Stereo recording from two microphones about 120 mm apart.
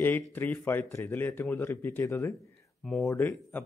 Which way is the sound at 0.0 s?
15° left (ahead or behind).